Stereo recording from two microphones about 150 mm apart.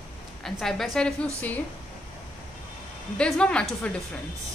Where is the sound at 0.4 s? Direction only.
Centre (ahead or behind).